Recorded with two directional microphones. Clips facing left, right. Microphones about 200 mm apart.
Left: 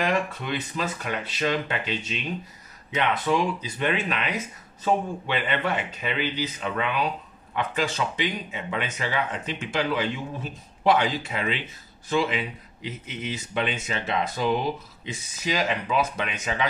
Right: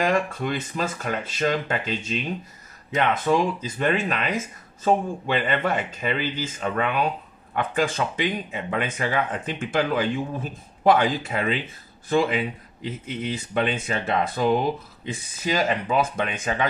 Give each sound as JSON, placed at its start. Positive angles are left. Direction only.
{"t": 0.0, "sound": "speech", "side_deg": -45}